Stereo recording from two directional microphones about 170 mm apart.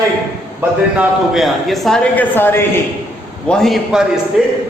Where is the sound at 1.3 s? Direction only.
Centre (ahead or behind).